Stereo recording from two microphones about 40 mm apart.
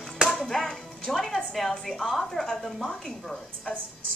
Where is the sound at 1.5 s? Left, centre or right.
Centre.